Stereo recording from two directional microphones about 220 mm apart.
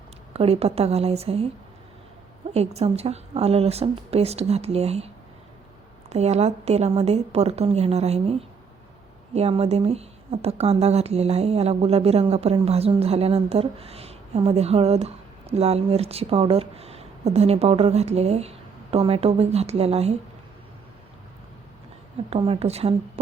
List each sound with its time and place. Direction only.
0.3 s a woman's voice: 25° right (ahead or behind)
2.5 s a woman's voice: 30° right (ahead or behind)
22.3 s a woman's voice: 25° right (ahead or behind)